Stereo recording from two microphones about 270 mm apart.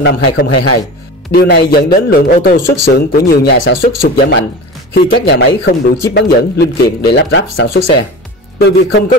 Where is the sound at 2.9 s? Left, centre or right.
Left.